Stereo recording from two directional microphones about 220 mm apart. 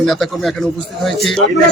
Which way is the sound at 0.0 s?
Centre (ahead or behind).